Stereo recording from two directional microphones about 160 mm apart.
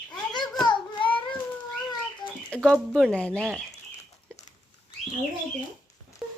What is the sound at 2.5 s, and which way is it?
Speech, 5° left (ahead or behind).